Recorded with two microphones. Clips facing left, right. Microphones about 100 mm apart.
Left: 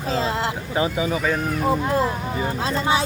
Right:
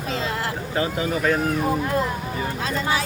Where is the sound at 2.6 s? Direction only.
25° left (ahead or behind).